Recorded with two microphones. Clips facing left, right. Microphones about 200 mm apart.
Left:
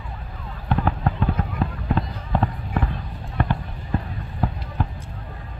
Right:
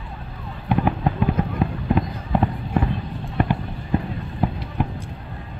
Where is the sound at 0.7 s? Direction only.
15° right (ahead or behind).